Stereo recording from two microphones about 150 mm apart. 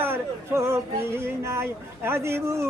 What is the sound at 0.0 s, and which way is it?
Speech, 15° right (ahead or behind).